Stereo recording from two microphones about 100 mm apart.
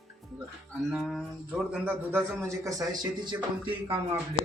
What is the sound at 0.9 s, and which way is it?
Speech, 5° right (ahead or behind).